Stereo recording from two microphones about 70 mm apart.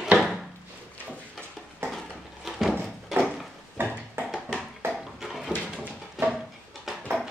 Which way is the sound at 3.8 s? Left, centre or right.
Right.